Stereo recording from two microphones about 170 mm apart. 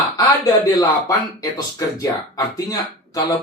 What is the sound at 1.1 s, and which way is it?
Speech, 20° left (ahead or behind).